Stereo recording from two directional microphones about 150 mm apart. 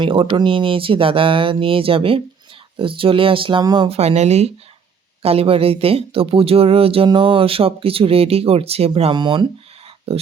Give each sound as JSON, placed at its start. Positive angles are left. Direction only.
{"t": 0.0, "sound": "speech", "side_deg": -35}
{"t": 3.8, "sound": "speech", "side_deg": -45}
{"t": 10.1, "sound": "speech", "side_deg": -40}